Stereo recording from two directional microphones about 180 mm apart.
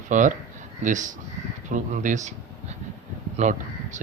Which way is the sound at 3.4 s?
40° right (ahead or behind).